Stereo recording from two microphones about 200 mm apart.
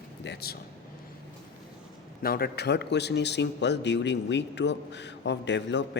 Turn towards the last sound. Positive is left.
turn(degrees=60)  # may be behind; listen again after turning